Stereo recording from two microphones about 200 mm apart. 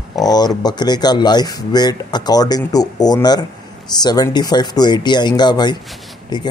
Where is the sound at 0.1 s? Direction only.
20° left (ahead or behind).